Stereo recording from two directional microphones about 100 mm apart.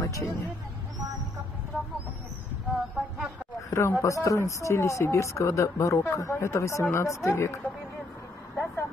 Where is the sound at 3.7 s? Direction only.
30° left (ahead or behind).